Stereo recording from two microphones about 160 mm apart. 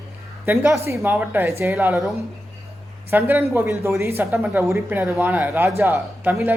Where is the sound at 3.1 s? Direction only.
10° right (ahead or behind).